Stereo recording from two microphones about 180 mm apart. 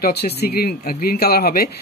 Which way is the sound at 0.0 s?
60° left (ahead or behind).